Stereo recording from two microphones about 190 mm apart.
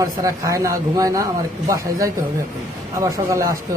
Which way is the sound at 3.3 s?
15° right (ahead or behind).